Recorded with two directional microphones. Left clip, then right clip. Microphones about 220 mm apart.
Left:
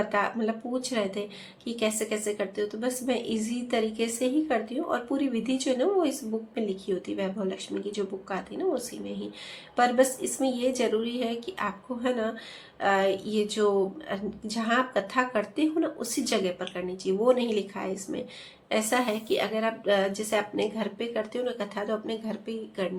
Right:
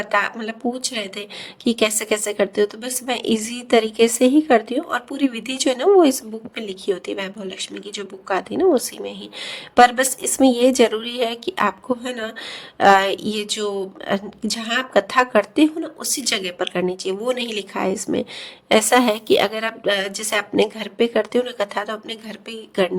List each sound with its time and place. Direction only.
0.1 s a woman's voice: 50° right (ahead or behind)
12.8 s a woman's voice: 50° right (ahead or behind)
13.6 s speech: 10° left (ahead or behind)
14.1 s a woman's voice: 50° right (ahead or behind)